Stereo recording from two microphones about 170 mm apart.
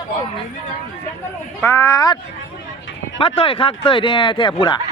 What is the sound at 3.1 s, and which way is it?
Speech, 30° left (ahead or behind).